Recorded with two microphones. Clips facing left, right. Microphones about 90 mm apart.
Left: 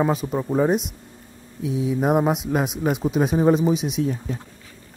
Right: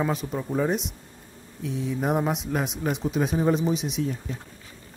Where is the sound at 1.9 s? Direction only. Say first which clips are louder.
Left 5 dB; 60° left (ahead or behind).